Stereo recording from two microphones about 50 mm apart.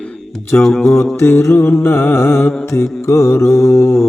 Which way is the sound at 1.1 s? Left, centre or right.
Left.